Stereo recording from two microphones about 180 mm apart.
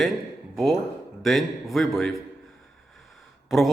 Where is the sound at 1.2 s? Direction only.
Centre (ahead or behind).